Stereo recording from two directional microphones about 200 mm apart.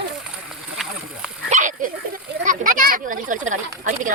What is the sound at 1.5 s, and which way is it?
Dog, 40° right (ahead or behind).